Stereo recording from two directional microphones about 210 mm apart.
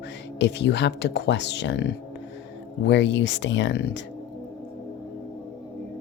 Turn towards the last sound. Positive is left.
turn(degrees=55)  # may be behind; listen again after turning